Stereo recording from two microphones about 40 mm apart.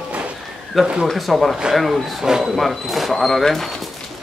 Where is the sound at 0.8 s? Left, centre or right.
Centre.